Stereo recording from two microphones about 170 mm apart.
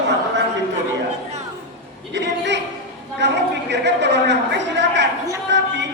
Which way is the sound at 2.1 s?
90° right.